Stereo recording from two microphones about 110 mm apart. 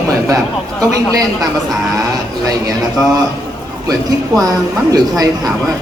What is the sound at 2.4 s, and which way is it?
A woman's voice, 35° right (ahead or behind).